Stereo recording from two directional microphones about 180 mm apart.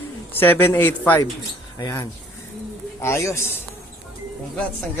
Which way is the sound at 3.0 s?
15° left (ahead or behind).